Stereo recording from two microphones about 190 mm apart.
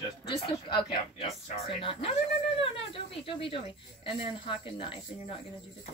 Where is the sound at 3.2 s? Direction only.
30° left (ahead or behind).